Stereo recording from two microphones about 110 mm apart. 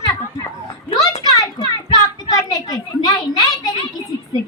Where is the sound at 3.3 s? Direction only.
30° left (ahead or behind).